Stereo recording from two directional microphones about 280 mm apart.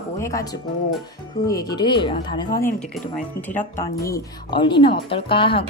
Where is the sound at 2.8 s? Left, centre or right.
Centre.